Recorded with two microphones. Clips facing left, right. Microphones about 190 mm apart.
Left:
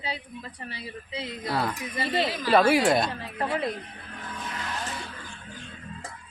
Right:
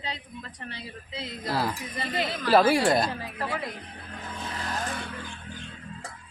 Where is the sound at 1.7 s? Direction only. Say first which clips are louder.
Left 3 dB; 20° left (ahead or behind).